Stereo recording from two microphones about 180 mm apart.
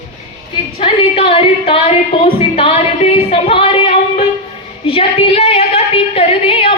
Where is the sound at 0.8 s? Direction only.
30° left (ahead or behind).